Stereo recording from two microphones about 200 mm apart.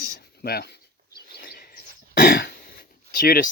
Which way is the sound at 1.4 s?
50° left (ahead or behind).